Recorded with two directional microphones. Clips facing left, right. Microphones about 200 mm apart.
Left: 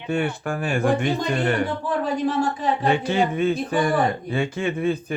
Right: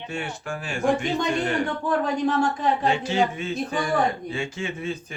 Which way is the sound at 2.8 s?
60° left (ahead or behind).